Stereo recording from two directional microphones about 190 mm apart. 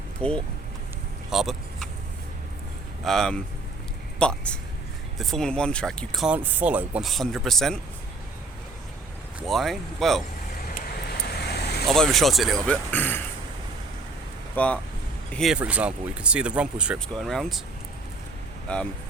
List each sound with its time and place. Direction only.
0.2 s speech: 5° left (ahead or behind)
1.3 s vehicle: centre (ahead or behind)
3.0 s speech: centre (ahead or behind)
9.5 s speech: centre (ahead or behind)
10.7 s vehicle: 50° left (ahead or behind)
11.9 s speech: centre (ahead or behind)
14.5 s speech: 5° left (ahead or behind)
18.7 s speech: 5° left (ahead or behind)